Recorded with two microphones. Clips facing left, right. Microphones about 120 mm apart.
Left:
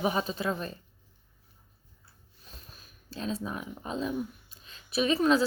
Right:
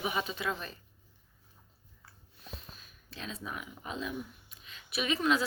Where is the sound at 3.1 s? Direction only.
35° left (ahead or behind).